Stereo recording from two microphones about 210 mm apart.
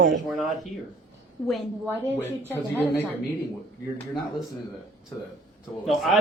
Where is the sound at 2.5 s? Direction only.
10° left (ahead or behind).